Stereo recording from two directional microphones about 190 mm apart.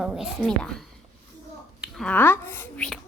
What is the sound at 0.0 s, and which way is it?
Speech, 5° right (ahead or behind).